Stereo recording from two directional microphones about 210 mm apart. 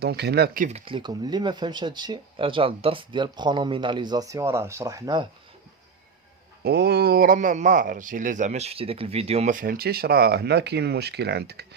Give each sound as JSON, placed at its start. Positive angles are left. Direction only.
{"t": 0.0, "sound": "speech", "side_deg": -50}
{"t": 0.9, "sound": "speech", "side_deg": -20}
{"t": 6.7, "sound": "speech", "side_deg": -50}